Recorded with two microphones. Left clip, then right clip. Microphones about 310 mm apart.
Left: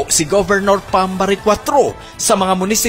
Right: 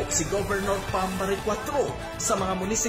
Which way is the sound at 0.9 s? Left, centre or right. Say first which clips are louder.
Left 12 dB; left.